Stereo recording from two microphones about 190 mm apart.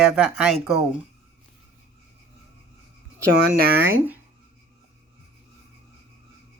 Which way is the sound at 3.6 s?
55° right (ahead or behind).